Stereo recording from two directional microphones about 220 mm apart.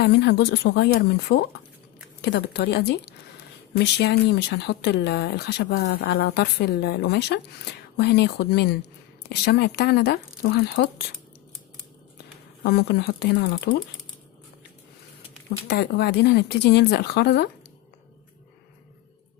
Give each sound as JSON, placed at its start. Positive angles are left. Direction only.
{"t": 0.0, "sound": "speech", "side_deg": 50}
{"t": 12.6, "sound": "speech", "side_deg": 50}
{"t": 15.4, "sound": "speech", "side_deg": 50}